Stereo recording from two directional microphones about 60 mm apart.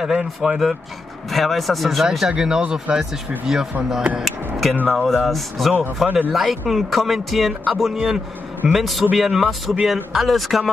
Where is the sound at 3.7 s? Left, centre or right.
Right.